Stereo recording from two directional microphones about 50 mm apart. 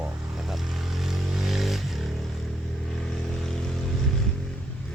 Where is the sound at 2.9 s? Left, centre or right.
Centre.